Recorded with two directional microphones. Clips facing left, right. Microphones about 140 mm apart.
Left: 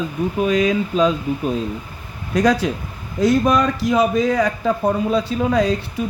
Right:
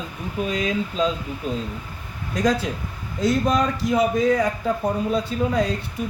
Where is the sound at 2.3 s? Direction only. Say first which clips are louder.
Left 5 dB; 85° left.